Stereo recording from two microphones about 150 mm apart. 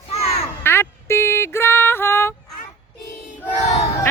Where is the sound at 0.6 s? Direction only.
15° left (ahead or behind).